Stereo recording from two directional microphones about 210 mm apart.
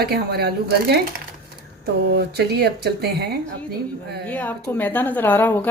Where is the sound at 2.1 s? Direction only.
50° right (ahead or behind).